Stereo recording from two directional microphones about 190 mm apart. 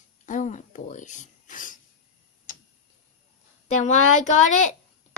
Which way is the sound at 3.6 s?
40° left (ahead or behind).